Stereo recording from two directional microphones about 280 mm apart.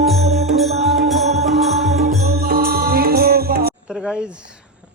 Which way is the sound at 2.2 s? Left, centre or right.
Right.